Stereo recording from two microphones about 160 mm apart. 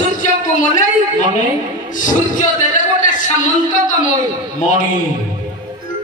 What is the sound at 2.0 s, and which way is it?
Speech, 55° left (ahead or behind).